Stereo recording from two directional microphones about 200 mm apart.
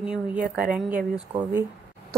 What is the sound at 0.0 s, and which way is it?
A woman's voice, 5° right (ahead or behind).